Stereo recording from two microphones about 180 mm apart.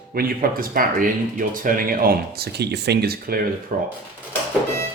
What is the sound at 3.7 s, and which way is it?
Speech, 45° right (ahead or behind).